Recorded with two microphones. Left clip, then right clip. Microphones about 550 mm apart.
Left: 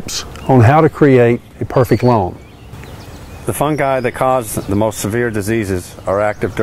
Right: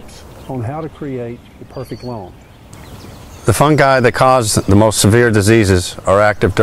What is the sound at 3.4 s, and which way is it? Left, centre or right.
Speech, right.